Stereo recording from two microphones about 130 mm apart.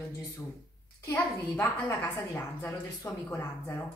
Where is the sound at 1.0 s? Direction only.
20° left (ahead or behind).